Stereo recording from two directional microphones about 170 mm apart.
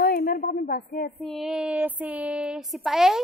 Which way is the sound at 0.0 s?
60° left (ahead or behind).